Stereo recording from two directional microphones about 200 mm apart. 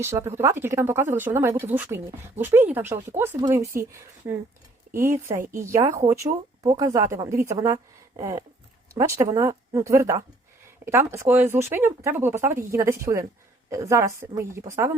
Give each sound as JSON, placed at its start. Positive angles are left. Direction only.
{"t": 0.0, "sound": "a woman's voice", "side_deg": -15}